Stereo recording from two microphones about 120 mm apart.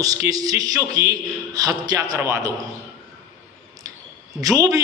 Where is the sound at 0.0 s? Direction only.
30° right (ahead or behind).